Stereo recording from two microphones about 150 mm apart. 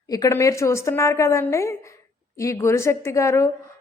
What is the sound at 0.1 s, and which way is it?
A woman's voice, 20° left (ahead or behind).